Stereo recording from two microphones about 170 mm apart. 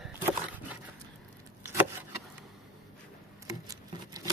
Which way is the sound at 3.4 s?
20° right (ahead or behind).